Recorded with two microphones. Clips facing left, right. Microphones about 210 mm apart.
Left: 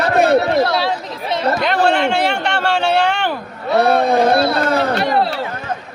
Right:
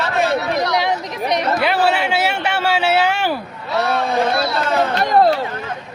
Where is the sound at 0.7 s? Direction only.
15° right (ahead or behind).